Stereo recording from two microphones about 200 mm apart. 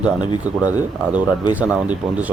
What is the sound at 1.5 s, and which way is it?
Speech, 10° right (ahead or behind).